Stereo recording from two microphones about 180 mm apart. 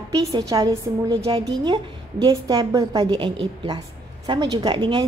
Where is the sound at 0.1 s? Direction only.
20° right (ahead or behind).